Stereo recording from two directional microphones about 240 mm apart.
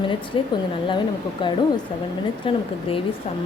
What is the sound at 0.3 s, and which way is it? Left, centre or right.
A woman's voice, left.